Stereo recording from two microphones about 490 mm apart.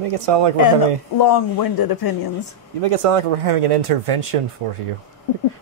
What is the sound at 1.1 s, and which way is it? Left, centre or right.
Speech, left.